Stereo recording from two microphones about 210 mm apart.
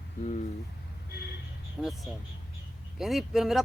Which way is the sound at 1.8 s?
5° right (ahead or behind).